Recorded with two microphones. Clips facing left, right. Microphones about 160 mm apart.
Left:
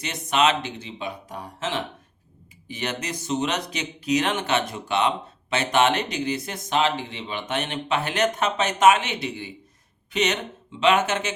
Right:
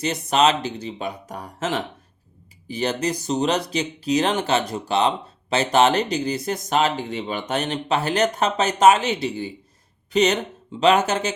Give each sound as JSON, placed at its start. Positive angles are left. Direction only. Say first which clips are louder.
{"t": 0.0, "sound": "speech", "louder": "right 3 dB", "side_deg": -35}